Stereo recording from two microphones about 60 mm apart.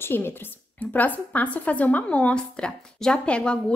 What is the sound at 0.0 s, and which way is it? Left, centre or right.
Speech, left.